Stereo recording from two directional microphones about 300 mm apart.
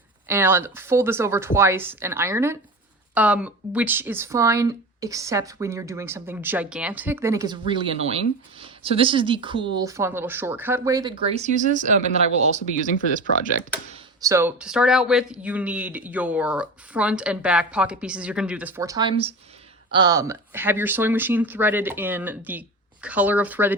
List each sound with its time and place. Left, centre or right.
0.3 s speech: centre
12.7 s speech: left
14.2 s speech: centre